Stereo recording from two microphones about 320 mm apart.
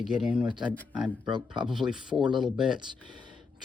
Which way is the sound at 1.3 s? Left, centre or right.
Centre.